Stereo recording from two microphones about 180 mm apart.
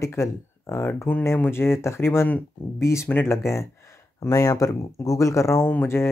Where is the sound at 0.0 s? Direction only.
15° left (ahead or behind).